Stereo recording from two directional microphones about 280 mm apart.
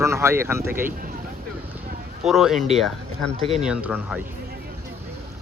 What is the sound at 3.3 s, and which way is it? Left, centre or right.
Speech, centre.